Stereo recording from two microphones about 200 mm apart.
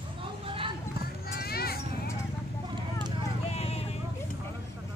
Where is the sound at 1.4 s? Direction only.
50° left (ahead or behind).